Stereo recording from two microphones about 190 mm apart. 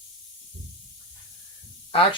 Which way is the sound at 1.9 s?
30° left (ahead or behind).